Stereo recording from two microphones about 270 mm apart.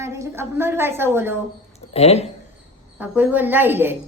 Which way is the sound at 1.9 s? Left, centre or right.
Left.